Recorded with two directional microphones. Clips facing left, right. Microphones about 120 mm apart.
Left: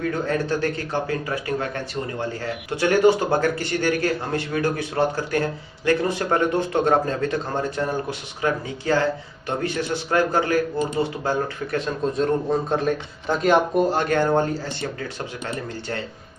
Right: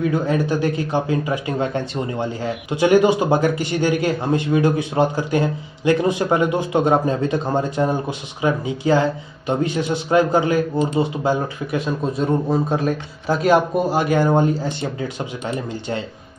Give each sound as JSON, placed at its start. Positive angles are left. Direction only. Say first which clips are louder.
{"t": 0.1, "sound": "speech", "louder": "right 4 dB", "side_deg": -15}